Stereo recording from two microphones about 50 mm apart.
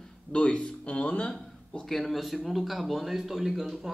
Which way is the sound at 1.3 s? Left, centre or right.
Centre.